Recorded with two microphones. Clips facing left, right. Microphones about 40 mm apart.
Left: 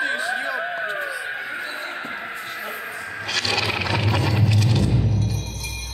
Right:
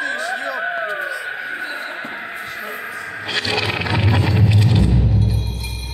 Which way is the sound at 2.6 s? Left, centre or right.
Centre.